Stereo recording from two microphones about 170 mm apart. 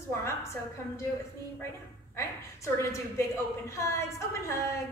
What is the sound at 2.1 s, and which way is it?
A woman's voice, 15° left (ahead or behind).